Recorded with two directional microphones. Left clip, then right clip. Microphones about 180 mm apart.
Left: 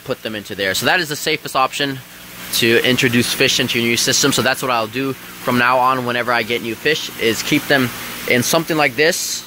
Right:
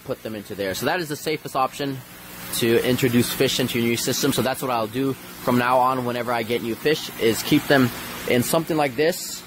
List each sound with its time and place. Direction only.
0.1 s speech: centre (ahead or behind)
6.8 s speech: 20° right (ahead or behind)
8.3 s speech: 10° right (ahead or behind)